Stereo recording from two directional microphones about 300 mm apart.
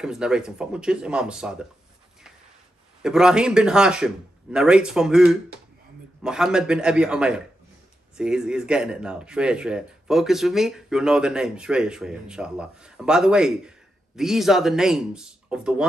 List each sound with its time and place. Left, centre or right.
0.0 s speech: centre
3.0 s speech: centre